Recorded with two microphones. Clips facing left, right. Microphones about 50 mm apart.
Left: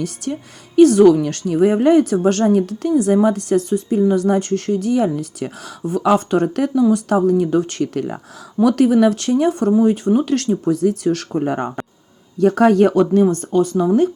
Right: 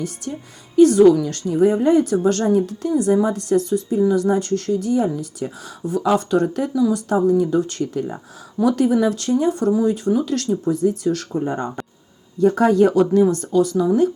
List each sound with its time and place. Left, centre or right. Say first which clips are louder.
0.2 s a woman's voice: left 5 dB; left
9.6 s a woman's voice: left 3 dB; left
11.4 s speech: left 4 dB; left
12.4 s a woman's voice: left 2 dB; left